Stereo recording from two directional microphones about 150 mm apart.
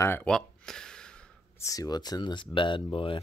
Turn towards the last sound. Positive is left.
turn(degrees=35)  # may be behind; listen again after turning